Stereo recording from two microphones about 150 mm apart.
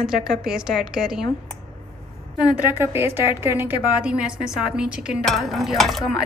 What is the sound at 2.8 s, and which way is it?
A woman's voice, 15° right (ahead or behind).